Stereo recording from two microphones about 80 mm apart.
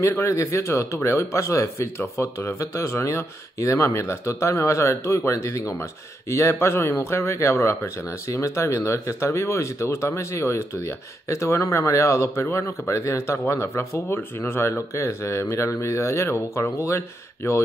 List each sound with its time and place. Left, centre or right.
0.0 s speech: left